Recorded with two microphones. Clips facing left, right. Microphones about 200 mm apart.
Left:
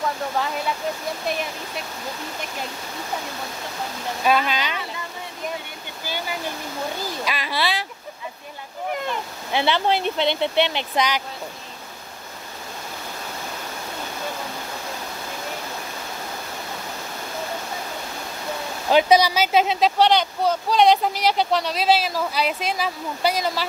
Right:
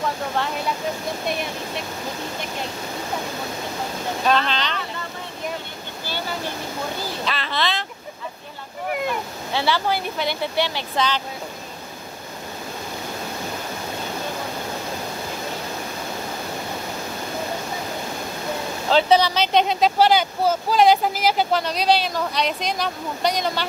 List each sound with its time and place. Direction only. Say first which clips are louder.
4.3 s speech: left 1 dB; 10° left (ahead or behind)
6.0 s speech: even; 15° left (ahead or behind)
9.5 s speech: left 2 dB; 20° left (ahead or behind)
18.9 s speech: left 1 dB; 15° left (ahead or behind)